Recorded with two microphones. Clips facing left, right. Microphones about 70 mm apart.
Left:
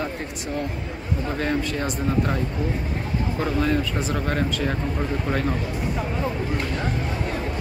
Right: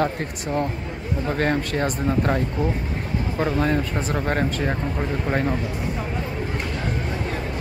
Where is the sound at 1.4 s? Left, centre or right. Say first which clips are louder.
Right 3 dB; right.